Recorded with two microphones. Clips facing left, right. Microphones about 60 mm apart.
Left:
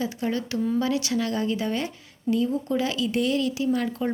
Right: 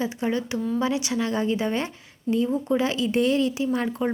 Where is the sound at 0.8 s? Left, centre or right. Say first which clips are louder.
Even; right.